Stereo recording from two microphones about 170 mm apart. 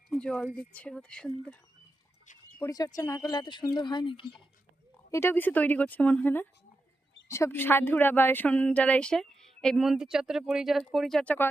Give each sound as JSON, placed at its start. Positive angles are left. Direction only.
{"t": 0.1, "sound": "a woman's voice", "side_deg": 5}
{"t": 2.6, "sound": "speech", "side_deg": 20}
{"t": 5.1, "sound": "a woman's voice", "side_deg": 15}